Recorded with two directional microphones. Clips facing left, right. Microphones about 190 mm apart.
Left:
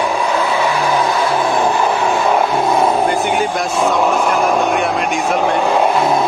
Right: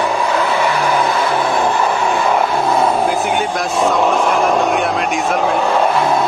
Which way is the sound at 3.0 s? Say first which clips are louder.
Left 1 dB; centre (ahead or behind).